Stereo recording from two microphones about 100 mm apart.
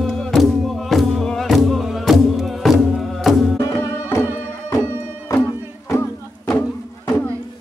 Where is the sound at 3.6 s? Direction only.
30° left (ahead or behind).